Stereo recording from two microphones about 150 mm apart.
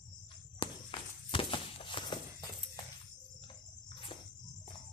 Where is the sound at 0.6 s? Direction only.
35° left (ahead or behind).